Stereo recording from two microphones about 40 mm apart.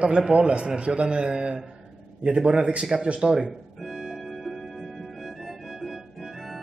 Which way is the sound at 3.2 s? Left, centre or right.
Centre.